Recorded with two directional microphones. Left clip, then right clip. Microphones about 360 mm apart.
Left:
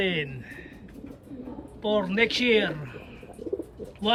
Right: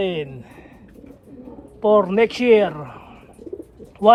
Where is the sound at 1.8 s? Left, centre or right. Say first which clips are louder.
Right 9 dB; centre.